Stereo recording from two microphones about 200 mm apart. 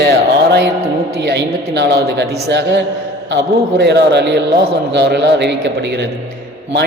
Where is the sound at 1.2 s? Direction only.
60° right (ahead or behind).